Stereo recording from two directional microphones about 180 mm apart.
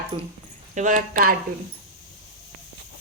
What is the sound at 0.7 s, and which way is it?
Speech, 45° right (ahead or behind).